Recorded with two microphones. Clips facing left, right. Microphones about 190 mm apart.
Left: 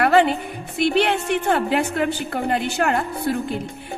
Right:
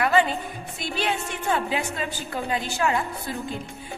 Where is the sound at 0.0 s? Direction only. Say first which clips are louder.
Left 5 dB; 70° left (ahead or behind).